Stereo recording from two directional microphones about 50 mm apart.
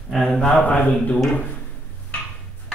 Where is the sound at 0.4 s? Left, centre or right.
Left.